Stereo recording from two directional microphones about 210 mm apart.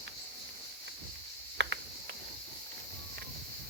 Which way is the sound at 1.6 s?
55° right (ahead or behind).